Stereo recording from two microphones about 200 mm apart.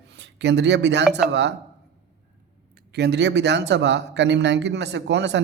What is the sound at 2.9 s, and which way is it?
Speech, 55° right (ahead or behind).